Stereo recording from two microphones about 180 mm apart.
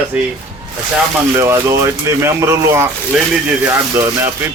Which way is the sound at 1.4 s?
15° right (ahead or behind).